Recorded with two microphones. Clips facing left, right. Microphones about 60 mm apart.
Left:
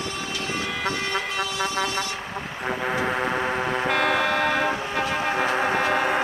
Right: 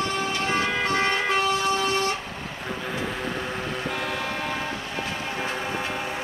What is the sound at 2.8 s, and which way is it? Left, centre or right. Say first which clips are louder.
Tick-tock: left 6 dB; left.